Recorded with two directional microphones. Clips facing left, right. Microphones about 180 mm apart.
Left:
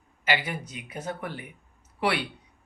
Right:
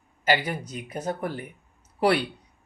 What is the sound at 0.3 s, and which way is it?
Speech, 40° right (ahead or behind).